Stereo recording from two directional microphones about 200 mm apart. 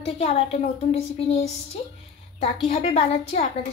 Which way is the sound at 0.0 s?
30° left (ahead or behind).